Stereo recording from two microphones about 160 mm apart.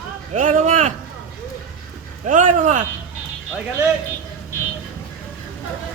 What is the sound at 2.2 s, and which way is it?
Speech, 55° right (ahead or behind).